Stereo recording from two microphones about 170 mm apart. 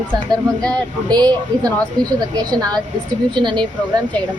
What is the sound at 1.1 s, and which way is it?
A woman's voice, 25° right (ahead or behind).